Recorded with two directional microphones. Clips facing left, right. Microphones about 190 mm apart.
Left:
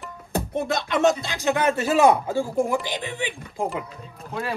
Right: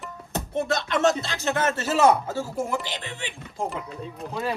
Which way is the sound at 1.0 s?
15° left (ahead or behind).